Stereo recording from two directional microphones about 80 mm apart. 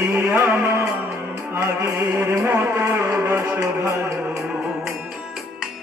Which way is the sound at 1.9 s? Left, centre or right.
Right.